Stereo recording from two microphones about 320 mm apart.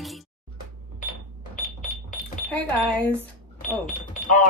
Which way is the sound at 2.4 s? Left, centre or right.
Centre.